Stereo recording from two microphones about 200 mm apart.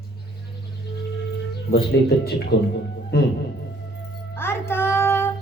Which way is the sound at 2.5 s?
55° left (ahead or behind).